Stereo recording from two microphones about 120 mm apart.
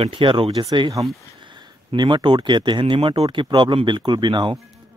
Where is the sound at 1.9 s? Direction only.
40° right (ahead or behind).